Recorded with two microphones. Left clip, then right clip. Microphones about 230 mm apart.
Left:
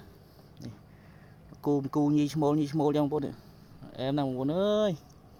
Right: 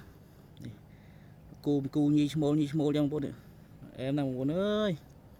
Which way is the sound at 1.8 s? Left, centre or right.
Centre.